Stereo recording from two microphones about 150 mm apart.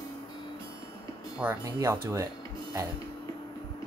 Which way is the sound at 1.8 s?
20° right (ahead or behind).